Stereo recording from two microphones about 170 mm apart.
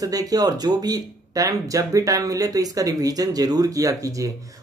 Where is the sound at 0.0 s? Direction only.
20° right (ahead or behind).